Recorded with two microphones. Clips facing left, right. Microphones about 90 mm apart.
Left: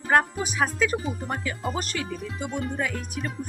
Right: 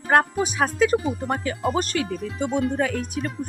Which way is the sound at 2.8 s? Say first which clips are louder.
Right 5 dB; 45° right (ahead or behind).